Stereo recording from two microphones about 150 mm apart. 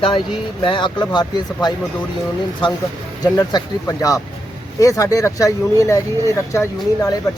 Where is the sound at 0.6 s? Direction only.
35° left (ahead or behind).